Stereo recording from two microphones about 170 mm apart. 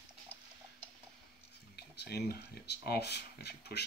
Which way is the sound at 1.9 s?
70° left (ahead or behind).